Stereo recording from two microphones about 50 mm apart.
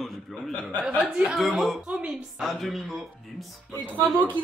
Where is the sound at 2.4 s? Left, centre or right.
Centre.